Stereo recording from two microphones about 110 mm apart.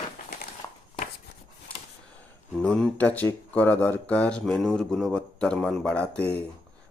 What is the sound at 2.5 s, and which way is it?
Speech, 5° left (ahead or behind).